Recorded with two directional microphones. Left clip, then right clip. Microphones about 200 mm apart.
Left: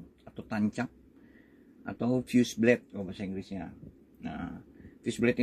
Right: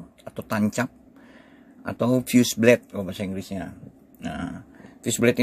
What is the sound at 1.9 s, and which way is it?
Speech, 45° right (ahead or behind).